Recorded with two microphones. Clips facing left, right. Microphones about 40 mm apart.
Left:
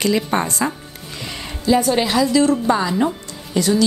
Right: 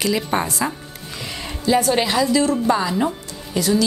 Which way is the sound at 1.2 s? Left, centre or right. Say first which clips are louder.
Left 2 dB; centre.